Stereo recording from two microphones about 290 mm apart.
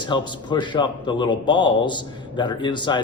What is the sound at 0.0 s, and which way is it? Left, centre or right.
Speech, centre.